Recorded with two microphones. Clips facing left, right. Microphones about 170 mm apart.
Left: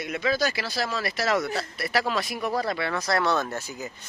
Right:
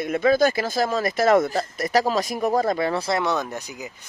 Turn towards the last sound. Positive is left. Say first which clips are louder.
# right 1 dB
turn(degrees=-15)  # may be behind; listen again after turning